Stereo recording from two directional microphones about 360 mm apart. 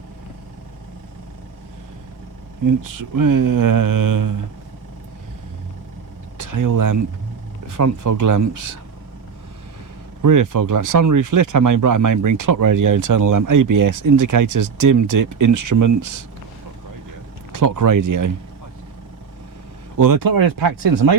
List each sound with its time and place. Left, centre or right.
2.6 s speech: right
6.3 s speech: right
10.2 s speech: right
17.5 s speech: right
20.0 s speech: right